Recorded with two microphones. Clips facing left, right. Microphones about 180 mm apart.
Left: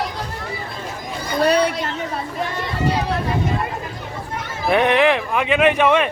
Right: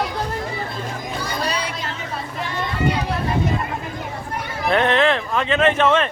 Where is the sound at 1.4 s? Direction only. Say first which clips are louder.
Left 13 dB; 60° left (ahead or behind).